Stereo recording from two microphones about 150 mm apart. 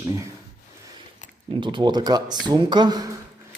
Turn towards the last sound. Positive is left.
turn(degrees=-25)  # may be behind; listen again after turning